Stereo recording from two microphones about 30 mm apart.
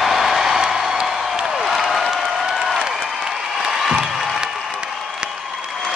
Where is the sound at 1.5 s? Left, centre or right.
Centre.